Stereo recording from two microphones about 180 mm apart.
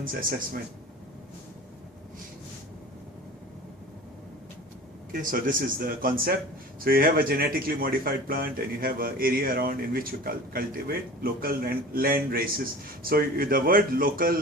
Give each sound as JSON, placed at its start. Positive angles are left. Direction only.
{"t": 0.0, "sound": "speech", "side_deg": -50}
{"t": 5.1, "sound": "speech", "side_deg": -50}